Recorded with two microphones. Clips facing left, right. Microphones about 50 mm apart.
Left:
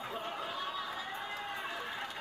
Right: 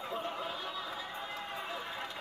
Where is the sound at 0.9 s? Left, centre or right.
Centre.